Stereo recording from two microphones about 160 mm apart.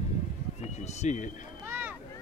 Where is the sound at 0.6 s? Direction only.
45° left (ahead or behind).